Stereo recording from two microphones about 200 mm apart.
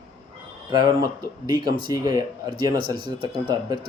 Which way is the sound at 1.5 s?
20° right (ahead or behind).